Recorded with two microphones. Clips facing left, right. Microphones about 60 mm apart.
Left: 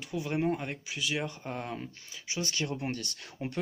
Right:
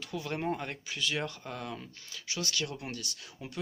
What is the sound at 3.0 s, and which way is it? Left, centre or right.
Speech, left.